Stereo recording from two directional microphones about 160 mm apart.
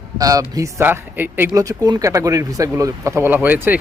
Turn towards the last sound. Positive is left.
turn(degrees=-10)  # may be behind; listen again after turning